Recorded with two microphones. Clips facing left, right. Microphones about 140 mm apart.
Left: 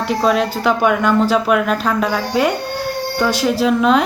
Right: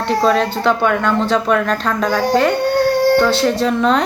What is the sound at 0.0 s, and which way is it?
Speech, 5° left (ahead or behind).